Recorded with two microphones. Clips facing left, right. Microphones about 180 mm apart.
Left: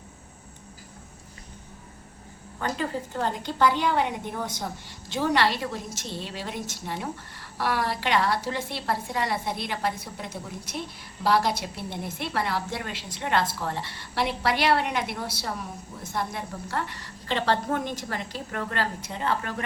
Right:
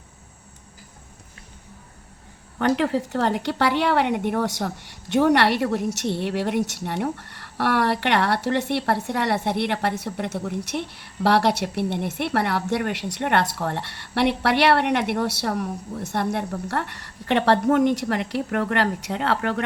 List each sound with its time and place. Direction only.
2.6 s a woman's voice: 70° right (ahead or behind)